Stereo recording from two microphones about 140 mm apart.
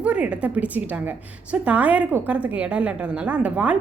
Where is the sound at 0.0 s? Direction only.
10° right (ahead or behind).